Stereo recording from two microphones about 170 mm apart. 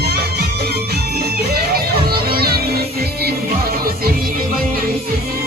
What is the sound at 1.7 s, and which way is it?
Music, 65° right (ahead or behind).